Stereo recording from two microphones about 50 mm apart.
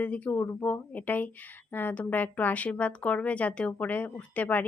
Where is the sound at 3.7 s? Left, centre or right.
Left.